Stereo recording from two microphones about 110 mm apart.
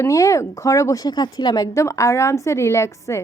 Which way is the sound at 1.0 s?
40° left (ahead or behind).